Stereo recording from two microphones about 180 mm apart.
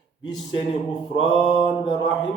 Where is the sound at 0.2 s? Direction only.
25° left (ahead or behind).